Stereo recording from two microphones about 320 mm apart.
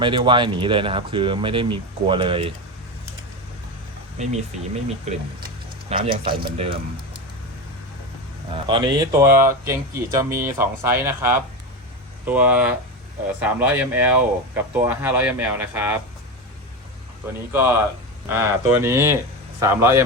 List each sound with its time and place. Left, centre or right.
0.0 s speech: centre
4.2 s speech: right
8.4 s speech: centre
17.5 s speech: centre